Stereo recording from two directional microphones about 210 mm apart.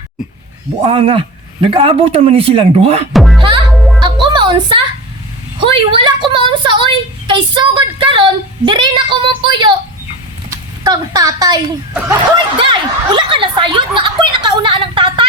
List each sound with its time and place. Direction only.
0.9 s a man's voice: 25° right (ahead or behind)
3.1 s music: centre (ahead or behind)
3.4 s music: 25° right (ahead or behind)
3.7 s music: centre (ahead or behind)
4.0 s music: 20° right (ahead or behind)
5.5 s a woman's voice: 25° right (ahead or behind)
12.5 s a sound: 25° right (ahead or behind)